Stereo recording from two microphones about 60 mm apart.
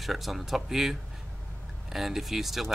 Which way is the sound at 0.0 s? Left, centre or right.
Centre.